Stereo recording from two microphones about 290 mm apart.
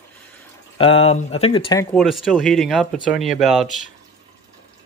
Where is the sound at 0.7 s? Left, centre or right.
Centre.